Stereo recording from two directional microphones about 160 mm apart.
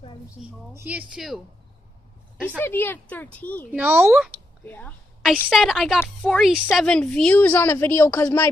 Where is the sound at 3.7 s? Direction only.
10° right (ahead or behind).